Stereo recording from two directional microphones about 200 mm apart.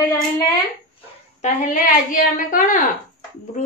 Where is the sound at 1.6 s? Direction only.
40° left (ahead or behind).